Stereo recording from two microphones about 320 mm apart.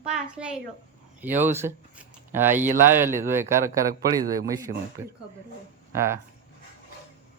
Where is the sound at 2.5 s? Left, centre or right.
Right.